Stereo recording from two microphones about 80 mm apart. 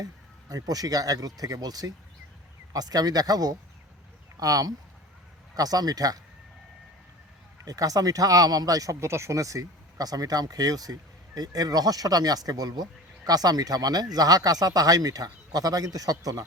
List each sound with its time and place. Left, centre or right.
0.0 s speech: right
7.6 s speech: right